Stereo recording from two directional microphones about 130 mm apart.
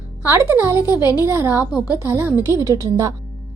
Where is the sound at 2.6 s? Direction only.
30° right (ahead or behind).